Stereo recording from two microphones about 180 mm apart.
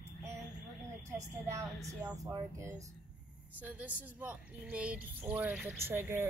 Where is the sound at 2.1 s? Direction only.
20° right (ahead or behind).